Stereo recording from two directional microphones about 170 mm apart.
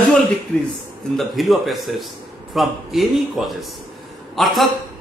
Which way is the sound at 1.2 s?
Centre (ahead or behind).